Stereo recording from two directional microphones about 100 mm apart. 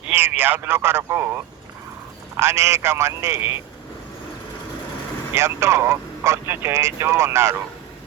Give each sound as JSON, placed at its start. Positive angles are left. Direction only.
{"t": 0.1, "sound": "speech", "side_deg": -20}
{"t": 2.3, "sound": "speech", "side_deg": -25}
{"t": 5.3, "sound": "speech", "side_deg": -25}